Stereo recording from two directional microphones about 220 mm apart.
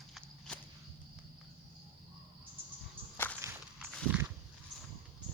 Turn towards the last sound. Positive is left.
turn(degrees=-5)  # may be behind; listen again after turning